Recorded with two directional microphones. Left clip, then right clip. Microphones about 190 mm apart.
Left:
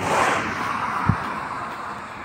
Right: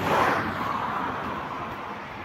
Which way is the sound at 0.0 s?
15° left (ahead or behind).